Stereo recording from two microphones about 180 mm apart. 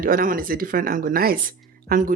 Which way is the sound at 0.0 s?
50° right (ahead or behind).